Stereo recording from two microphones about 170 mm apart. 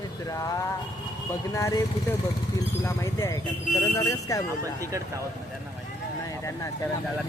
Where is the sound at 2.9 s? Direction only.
15° left (ahead or behind).